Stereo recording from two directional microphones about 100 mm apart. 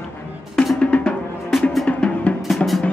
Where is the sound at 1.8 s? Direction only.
15° left (ahead or behind).